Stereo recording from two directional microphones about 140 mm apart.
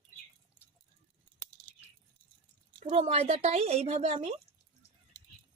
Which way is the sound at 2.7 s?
60° right (ahead or behind).